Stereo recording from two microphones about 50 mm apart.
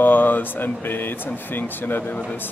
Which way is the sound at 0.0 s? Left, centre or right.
Left.